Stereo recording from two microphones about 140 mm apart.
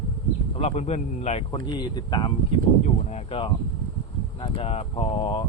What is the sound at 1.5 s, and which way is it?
Speech, 30° left (ahead or behind).